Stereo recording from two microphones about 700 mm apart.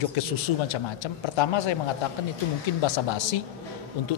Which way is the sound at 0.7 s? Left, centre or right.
Left.